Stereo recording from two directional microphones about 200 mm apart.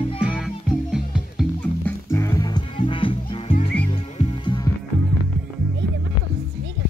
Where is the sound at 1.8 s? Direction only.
15° left (ahead or behind).